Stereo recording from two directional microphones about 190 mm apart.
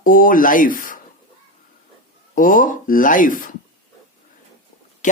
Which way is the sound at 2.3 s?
45° left (ahead or behind).